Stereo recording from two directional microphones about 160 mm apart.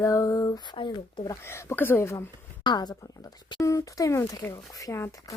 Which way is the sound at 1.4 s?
15° left (ahead or behind).